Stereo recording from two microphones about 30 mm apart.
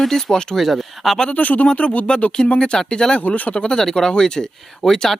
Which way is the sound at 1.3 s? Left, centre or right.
Left.